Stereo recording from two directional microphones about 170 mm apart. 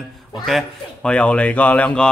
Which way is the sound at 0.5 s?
5° left (ahead or behind).